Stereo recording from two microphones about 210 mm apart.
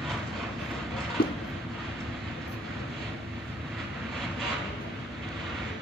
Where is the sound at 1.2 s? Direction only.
45° left (ahead or behind).